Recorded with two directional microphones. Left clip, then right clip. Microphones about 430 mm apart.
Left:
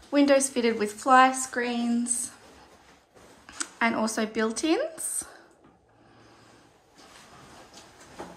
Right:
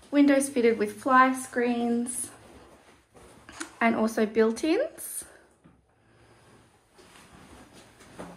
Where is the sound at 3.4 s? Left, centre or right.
Centre.